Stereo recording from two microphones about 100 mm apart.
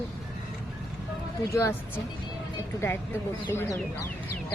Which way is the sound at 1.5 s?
30° left (ahead or behind).